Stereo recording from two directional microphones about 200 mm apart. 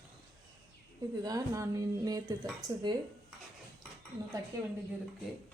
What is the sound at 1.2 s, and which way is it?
Speech, 15° right (ahead or behind).